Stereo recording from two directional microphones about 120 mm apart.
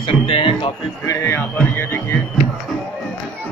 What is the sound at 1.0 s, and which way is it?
Speech, 25° left (ahead or behind).